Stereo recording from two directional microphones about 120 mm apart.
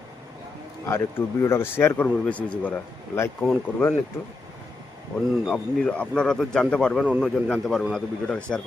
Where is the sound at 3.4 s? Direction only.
15° left (ahead or behind).